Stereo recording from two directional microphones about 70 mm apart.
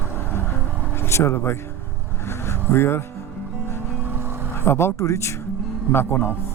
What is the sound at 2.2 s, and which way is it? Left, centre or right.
Vehicle, left.